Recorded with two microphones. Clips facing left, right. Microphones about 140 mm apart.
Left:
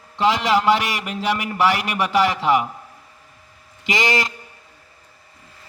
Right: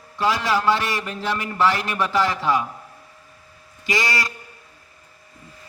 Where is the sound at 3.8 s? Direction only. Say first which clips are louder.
Left 3 dB; 20° left (ahead or behind).